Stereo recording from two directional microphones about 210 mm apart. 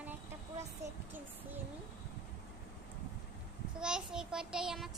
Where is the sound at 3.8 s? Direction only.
5° right (ahead or behind).